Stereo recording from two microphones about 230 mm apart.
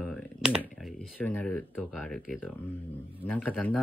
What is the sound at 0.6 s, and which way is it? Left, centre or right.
Speech, centre.